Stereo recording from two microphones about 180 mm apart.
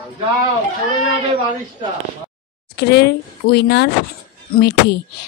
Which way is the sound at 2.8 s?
65° left (ahead or behind).